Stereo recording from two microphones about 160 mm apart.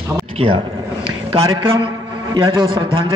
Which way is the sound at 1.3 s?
30° right (ahead or behind).